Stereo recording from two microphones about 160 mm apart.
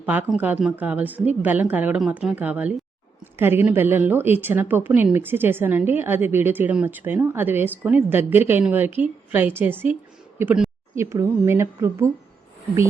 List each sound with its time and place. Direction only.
0.0 s a woman's voice: 10° right (ahead or behind)